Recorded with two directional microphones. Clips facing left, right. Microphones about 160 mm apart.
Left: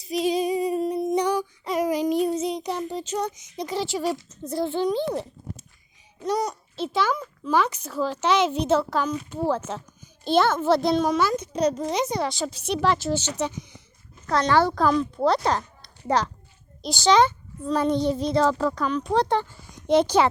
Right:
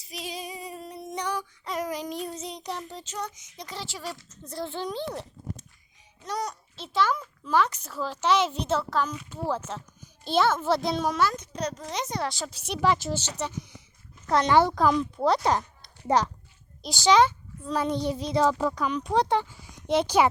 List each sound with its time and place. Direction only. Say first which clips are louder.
0.0 s female singing: left 14 dB; 20° left (ahead or behind); by 3.0 s 5° left (ahead or behind)
3.0 s a woman's voice: left 8 dB; 15° left (ahead or behind); by 13.7 s centre (ahead or behind)
14.3 s a child's voice: even; 20° right (ahead or behind)